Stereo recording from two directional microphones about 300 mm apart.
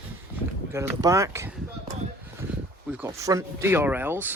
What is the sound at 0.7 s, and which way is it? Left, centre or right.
Speech, centre.